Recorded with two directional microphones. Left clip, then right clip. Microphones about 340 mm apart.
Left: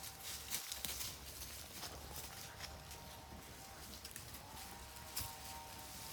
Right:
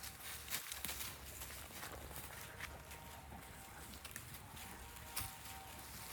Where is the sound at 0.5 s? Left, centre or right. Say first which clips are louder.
Right 1 dB; centre.